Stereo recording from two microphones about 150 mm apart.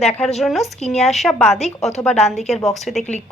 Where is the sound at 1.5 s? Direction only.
45° left (ahead or behind).